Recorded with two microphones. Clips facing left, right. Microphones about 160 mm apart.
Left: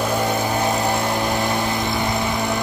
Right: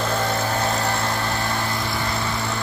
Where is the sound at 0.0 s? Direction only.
15° left (ahead or behind).